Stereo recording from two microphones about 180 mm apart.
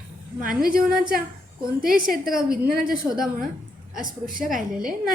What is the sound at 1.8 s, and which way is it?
Speech, 50° right (ahead or behind).